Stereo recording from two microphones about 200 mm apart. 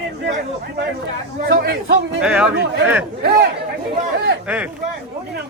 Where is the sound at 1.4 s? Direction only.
55° right (ahead or behind).